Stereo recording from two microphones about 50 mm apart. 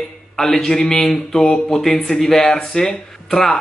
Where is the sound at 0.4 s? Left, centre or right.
Centre.